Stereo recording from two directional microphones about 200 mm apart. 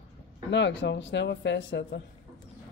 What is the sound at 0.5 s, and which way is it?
Speech, 60° left (ahead or behind).